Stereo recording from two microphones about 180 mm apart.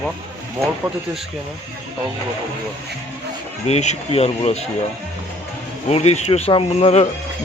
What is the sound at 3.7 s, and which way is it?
Speech, 40° left (ahead or behind).